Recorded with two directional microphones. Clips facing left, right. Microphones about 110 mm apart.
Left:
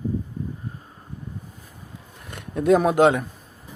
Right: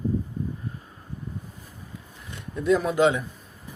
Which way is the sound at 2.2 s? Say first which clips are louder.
Left 6 dB; 60° left (ahead or behind).